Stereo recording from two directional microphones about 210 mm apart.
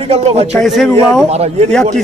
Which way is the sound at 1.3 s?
30° right (ahead or behind).